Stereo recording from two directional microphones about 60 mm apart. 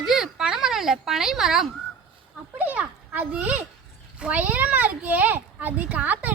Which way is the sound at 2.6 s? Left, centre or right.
Right.